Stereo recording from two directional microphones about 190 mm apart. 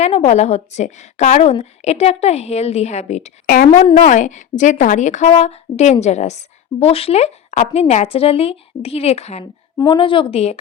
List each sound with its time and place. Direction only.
0.0 s a woman's voice: 35° left (ahead or behind)
3.4 s a woman's voice: 45° left (ahead or behind)
9.4 s a woman's voice: 20° left (ahead or behind)